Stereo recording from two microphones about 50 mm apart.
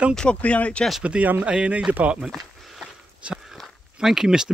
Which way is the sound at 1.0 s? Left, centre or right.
Right.